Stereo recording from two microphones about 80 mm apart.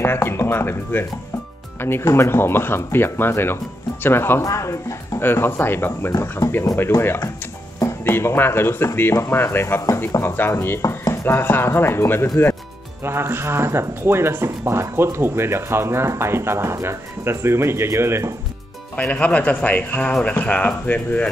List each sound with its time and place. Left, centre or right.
0.0 s speech: left
5.2 s speech: left
8.0 s speech: left
10.8 s music: left
11.2 s speech: left
13.0 s speech: right
18.9 s a man's voice: centre